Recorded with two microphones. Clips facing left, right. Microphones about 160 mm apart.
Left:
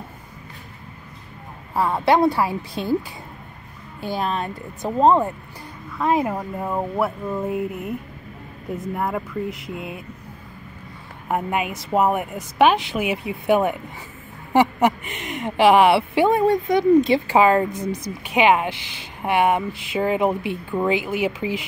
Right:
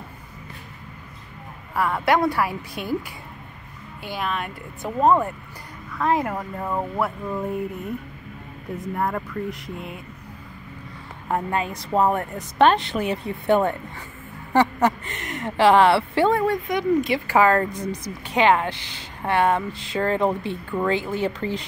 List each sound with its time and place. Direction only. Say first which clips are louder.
1.8 s speech: left 3 dB; 25° left (ahead or behind)
4.0 s speech: left 4 dB; 35° left (ahead or behind); by 7.5 s 5° left (ahead or behind)
8.7 s speech: left 1 dB; centre (ahead or behind)
11.2 s speech: left 1 dB; 15° left (ahead or behind)
16.4 s speech: left 5 dB; 30° left (ahead or behind); by 21.6 s 10° left (ahead or behind)